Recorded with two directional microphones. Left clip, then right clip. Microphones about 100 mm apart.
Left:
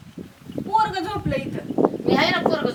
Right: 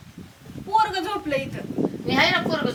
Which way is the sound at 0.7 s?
Centre (ahead or behind).